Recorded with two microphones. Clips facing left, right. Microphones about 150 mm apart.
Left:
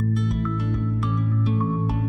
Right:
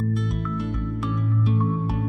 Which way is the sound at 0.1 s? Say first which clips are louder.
Left 2 dB; centre (ahead or behind).